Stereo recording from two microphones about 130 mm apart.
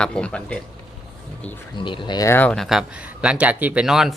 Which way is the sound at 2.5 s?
Centre (ahead or behind).